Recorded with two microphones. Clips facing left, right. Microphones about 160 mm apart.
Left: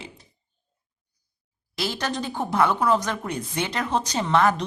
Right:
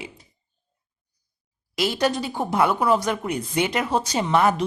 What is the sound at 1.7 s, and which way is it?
Speech, 15° right (ahead or behind).